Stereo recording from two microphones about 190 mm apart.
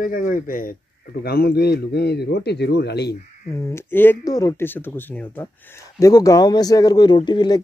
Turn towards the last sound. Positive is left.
turn(degrees=25)  # may be behind; listen again after turning